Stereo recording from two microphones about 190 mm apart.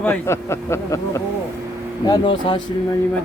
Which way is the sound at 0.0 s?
10° left (ahead or behind).